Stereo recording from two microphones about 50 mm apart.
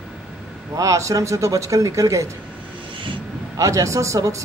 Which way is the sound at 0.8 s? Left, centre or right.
Right.